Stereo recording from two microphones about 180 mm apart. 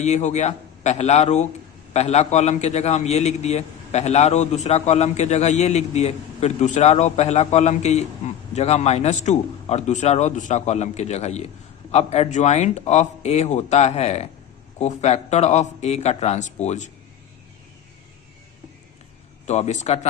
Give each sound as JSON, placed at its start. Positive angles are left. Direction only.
{"t": 0.0, "sound": "a man's voice", "side_deg": 40}
{"t": 19.5, "sound": "a man's voice", "side_deg": 40}